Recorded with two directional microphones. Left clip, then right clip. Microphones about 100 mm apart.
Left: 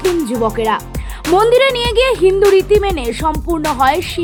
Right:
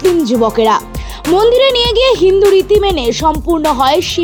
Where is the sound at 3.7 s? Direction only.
25° right (ahead or behind).